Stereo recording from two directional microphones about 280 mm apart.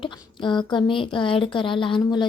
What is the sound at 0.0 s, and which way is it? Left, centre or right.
A woman's voice, centre.